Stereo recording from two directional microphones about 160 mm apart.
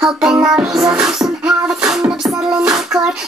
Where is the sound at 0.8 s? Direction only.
5° right (ahead or behind).